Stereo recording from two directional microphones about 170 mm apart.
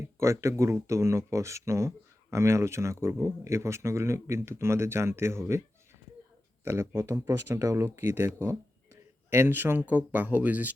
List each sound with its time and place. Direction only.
0.0 s speech: 15° right (ahead or behind)